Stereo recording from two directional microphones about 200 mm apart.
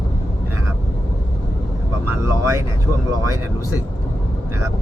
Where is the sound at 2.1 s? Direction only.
15° right (ahead or behind).